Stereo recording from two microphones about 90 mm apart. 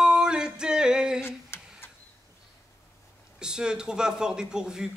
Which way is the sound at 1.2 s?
25° left (ahead or behind).